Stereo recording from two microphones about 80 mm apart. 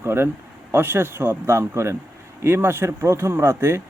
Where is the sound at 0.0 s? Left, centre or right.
Right.